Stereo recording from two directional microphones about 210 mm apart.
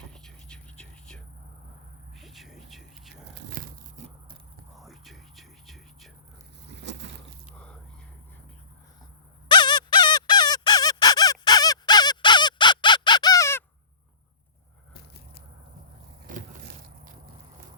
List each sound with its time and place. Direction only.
0.1 s whispering: 5° left (ahead or behind)
2.1 s a sound: centre (ahead or behind)
3.6 s tearing: 40° right (ahead or behind)
4.8 s whispering: centre (ahead or behind)
7.0 s a sound: 55° right (ahead or behind)
9.5 s squeak: 20° left (ahead or behind)
16.2 s vehicle: 40° right (ahead or behind)